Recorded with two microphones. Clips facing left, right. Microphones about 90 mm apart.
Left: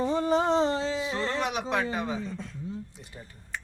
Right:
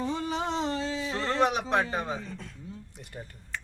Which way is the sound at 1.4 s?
35° right (ahead or behind).